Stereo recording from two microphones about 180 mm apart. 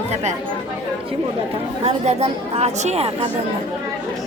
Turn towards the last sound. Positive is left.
turn(degrees=-35)  # may be behind; listen again after turning